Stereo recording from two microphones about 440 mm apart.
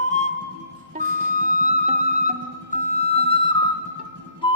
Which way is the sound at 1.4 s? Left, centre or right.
Centre.